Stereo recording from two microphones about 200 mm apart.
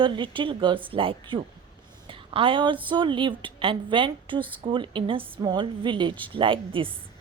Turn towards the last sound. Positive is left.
turn(degrees=-25)  # may be behind; listen again after turning